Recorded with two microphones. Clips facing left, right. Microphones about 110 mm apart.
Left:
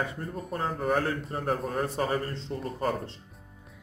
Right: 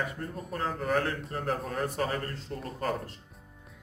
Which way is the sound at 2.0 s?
20° left (ahead or behind).